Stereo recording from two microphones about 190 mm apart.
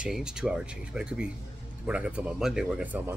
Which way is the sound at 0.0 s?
5° right (ahead or behind).